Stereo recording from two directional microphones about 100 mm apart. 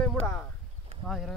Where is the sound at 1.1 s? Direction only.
5° left (ahead or behind).